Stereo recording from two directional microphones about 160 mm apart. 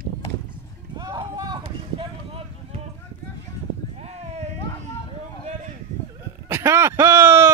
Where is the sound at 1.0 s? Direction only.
30° right (ahead or behind).